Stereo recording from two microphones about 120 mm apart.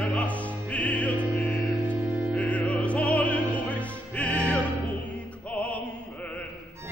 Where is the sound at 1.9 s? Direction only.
10° right (ahead or behind).